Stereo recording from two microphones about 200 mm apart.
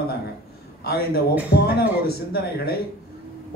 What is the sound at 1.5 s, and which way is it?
Speech, 55° left (ahead or behind).